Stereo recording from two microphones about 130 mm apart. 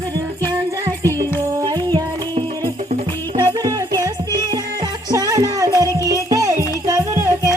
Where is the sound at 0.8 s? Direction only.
25° right (ahead or behind).